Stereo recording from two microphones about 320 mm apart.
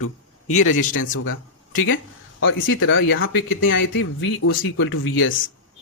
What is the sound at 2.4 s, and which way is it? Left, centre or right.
Speech, left.